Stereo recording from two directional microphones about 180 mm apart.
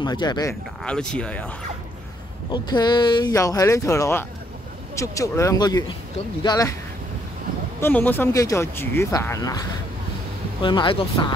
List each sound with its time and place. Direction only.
0.0 s speech: 25° left (ahead or behind)
0.8 s speech: 5° left (ahead or behind)
2.5 s speech: 25° left (ahead or behind)
7.8 s speech: 10° left (ahead or behind); by 11.3 s 25° left (ahead or behind)